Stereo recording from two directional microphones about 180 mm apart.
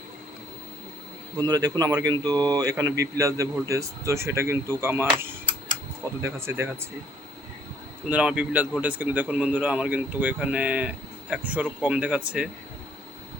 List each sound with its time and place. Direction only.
1.4 s speech: 20° right (ahead or behind)
8.1 s speech: 5° right (ahead or behind)